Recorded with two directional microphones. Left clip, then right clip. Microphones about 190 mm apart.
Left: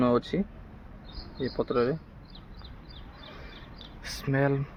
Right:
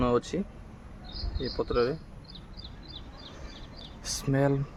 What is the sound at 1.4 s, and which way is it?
Speech, 25° left (ahead or behind).